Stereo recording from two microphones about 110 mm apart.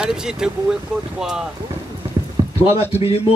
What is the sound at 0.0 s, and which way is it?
Speech, 5° right (ahead or behind).